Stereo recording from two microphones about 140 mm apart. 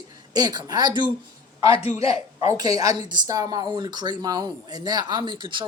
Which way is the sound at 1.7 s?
45° left (ahead or behind).